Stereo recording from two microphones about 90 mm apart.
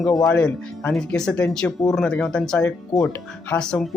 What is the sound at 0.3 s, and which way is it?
Speech, 10° left (ahead or behind).